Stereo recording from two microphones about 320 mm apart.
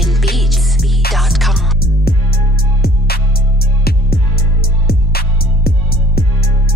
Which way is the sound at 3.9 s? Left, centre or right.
Left.